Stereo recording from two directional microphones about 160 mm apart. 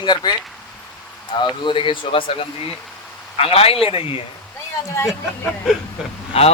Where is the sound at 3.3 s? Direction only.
40° left (ahead or behind).